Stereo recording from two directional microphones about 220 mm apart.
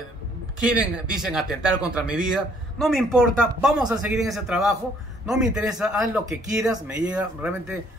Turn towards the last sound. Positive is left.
turn(degrees=-5)  # may be behind; listen again after turning